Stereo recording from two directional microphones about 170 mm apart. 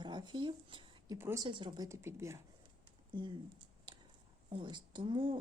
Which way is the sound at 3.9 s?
25° right (ahead or behind).